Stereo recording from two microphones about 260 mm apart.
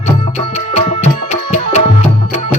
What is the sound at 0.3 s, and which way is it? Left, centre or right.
Music, left.